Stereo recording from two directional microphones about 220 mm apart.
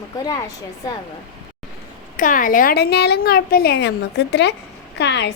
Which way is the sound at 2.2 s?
35° left (ahead or behind).